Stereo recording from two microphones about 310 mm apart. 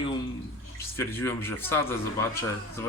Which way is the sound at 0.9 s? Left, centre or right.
Centre.